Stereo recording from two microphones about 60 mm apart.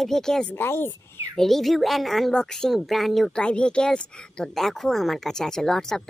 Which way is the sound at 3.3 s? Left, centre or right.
Centre.